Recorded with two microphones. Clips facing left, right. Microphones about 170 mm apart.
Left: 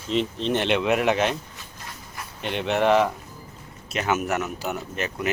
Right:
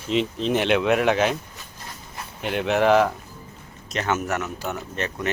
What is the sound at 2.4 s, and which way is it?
Speech, centre (ahead or behind).